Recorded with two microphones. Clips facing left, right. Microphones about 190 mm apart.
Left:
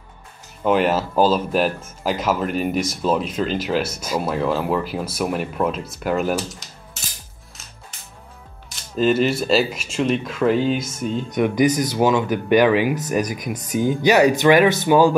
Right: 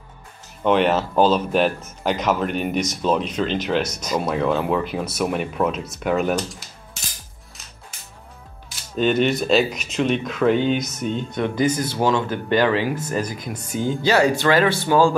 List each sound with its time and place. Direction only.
0.7 s speech: 5° left (ahead or behind)
8.6 s speech: centre (ahead or behind)
11.3 s speech: 15° left (ahead or behind)